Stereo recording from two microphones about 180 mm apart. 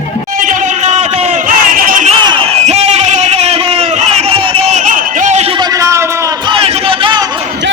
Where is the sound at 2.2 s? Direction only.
30° right (ahead or behind).